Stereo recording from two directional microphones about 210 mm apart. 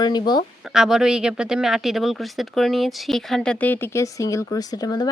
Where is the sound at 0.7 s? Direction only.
Centre (ahead or behind).